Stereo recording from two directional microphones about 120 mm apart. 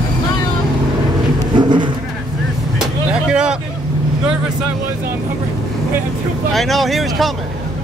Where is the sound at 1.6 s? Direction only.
40° right (ahead or behind).